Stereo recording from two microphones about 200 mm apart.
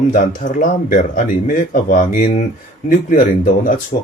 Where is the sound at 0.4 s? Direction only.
35° left (ahead or behind).